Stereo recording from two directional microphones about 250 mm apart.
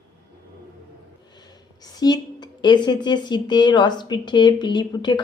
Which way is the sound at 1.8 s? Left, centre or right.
Centre.